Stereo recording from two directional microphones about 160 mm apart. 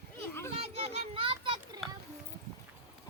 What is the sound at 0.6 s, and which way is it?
Children playing, 40° right (ahead or behind).